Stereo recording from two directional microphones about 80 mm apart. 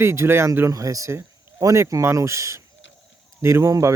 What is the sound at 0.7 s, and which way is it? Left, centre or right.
Speech, right.